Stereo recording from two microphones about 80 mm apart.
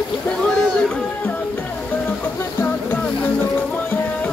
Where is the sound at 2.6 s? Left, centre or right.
Left.